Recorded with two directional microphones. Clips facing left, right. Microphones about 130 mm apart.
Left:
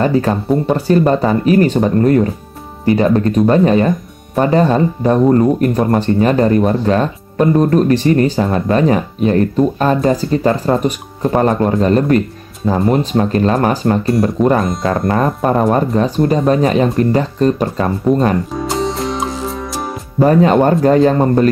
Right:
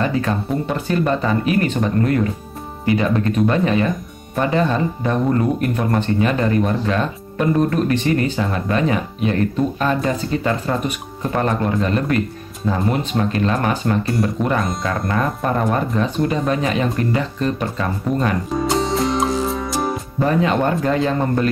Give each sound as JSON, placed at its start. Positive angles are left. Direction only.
{"t": 0.0, "sound": "speech", "side_deg": 35}
{"t": 18.5, "sound": "music", "side_deg": 0}
{"t": 20.2, "sound": "speech", "side_deg": 40}